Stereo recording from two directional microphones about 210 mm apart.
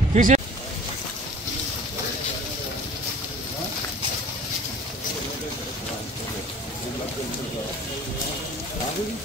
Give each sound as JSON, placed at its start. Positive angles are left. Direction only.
{"t": 0.1, "sound": "speech", "side_deg": -35}